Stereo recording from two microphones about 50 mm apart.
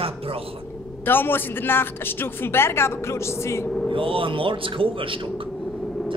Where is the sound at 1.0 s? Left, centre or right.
Left.